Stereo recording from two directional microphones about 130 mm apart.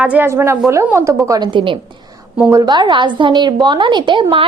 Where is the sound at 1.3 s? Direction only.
35° right (ahead or behind).